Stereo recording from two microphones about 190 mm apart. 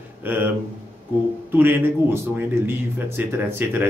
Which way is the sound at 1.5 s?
10° right (ahead or behind).